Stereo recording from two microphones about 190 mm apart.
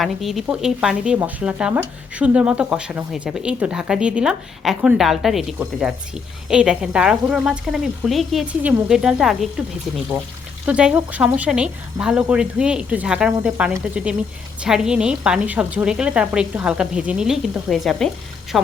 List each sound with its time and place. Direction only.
0.0 s speech: centre (ahead or behind)
10.7 s speech: 5° right (ahead or behind)